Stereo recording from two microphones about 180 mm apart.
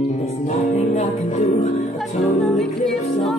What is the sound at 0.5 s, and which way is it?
Music, 35° left (ahead or behind).